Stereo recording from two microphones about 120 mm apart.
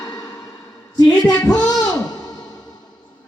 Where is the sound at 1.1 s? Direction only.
5° left (ahead or behind).